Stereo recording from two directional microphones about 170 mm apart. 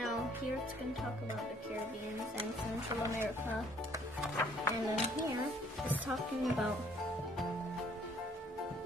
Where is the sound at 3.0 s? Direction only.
15° right (ahead or behind).